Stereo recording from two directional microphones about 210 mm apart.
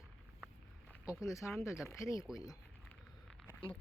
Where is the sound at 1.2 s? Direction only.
15° left (ahead or behind).